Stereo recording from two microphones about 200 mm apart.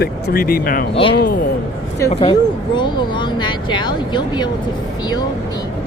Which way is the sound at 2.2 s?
25° left (ahead or behind).